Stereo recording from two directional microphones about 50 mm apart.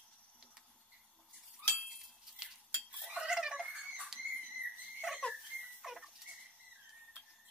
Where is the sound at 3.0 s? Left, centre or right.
Centre.